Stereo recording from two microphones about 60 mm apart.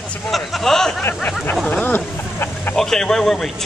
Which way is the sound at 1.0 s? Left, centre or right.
Left.